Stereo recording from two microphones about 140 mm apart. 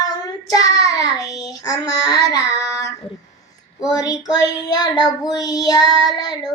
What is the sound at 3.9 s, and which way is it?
Child singing, 25° left (ahead or behind).